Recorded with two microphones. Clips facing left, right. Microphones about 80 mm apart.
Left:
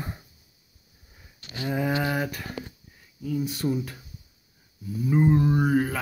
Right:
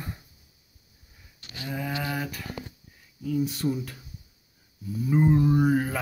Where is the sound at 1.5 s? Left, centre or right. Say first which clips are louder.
Left 6 dB; left.